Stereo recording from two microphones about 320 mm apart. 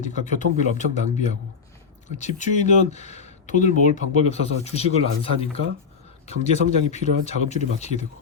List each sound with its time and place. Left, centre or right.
0.0 s speech: left